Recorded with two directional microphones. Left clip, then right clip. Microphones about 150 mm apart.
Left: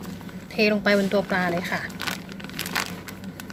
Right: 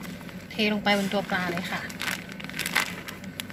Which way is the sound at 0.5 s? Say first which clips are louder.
Left 4 dB; 55° left (ahead or behind).